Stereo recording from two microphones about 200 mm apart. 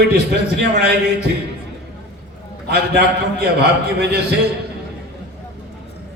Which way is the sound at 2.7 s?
55° right (ahead or behind).